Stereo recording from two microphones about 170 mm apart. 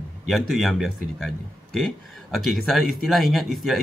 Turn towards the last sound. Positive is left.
turn(degrees=0)  # may be behind; listen again after turning